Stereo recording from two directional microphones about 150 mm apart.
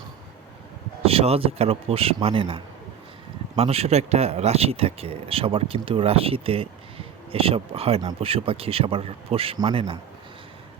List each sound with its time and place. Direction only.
1.0 s speech: 40° right (ahead or behind)